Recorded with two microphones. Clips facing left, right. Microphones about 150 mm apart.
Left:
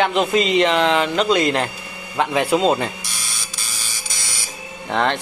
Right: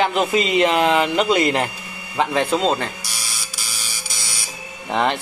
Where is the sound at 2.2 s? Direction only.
5° left (ahead or behind).